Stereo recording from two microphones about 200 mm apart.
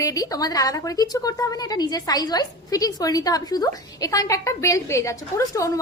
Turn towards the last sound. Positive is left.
turn(degrees=15)  # may be behind; listen again after turning